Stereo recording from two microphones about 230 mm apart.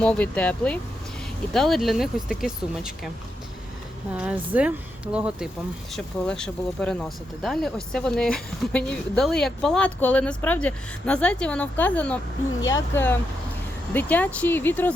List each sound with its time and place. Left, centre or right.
0.0 s speech: centre
4.1 s speech: centre